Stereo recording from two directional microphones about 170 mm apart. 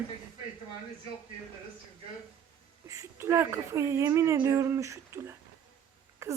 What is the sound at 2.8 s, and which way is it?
A woman's voice, 15° right (ahead or behind).